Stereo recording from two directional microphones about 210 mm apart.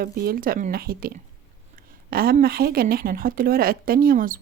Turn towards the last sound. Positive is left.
turn(degrees=-40)  # may be behind; listen again after turning